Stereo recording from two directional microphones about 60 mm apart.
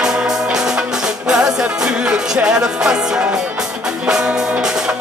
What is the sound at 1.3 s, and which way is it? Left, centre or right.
Music, centre.